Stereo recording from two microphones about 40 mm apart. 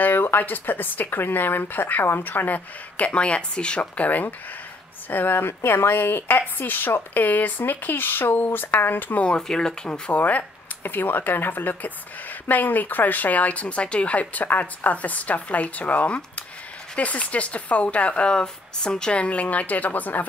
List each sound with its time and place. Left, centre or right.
0.0 s speech: left
3.1 s speech: left
5.1 s speech: left
9.5 s speech: centre
10.1 s speech: left
10.8 s speech: left